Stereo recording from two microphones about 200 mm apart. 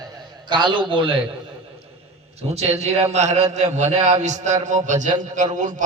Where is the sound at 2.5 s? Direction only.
30° right (ahead or behind).